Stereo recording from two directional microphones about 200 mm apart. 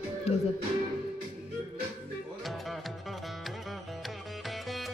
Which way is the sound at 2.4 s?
Centre (ahead or behind).